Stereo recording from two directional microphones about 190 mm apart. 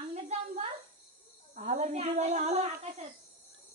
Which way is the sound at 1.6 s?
40° right (ahead or behind).